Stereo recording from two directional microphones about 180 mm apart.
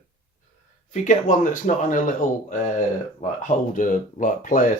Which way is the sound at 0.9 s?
45° left (ahead or behind).